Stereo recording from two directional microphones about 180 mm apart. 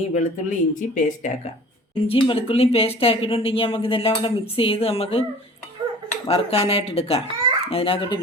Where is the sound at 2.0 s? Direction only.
30° left (ahead or behind).